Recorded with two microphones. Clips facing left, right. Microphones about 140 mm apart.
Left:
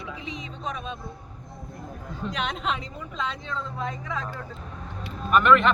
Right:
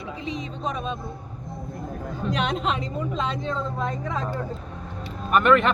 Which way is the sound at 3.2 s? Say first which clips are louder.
Right 2 dB; 45° right (ahead or behind).